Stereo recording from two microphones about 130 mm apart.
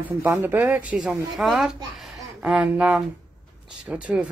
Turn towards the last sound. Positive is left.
turn(degrees=-10)  # may be behind; listen again after turning